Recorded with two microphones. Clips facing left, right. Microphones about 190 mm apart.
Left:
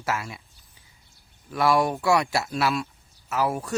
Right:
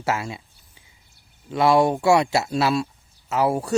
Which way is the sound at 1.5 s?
25° right (ahead or behind).